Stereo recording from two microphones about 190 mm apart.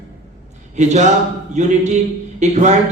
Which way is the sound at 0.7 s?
35° right (ahead or behind).